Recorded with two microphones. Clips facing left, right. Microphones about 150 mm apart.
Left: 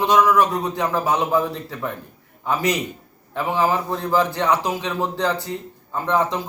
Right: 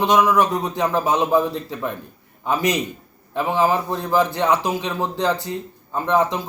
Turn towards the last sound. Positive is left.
turn(degrees=-15)  # may be behind; listen again after turning